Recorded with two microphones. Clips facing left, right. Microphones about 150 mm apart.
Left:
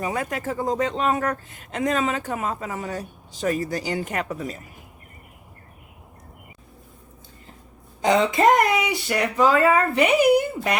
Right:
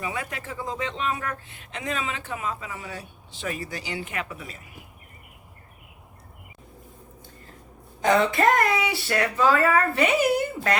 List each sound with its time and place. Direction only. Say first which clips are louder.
0.0 s speech: left 6 dB; 45° left (ahead or behind)
8.0 s speech: left 2 dB; 20° left (ahead or behind)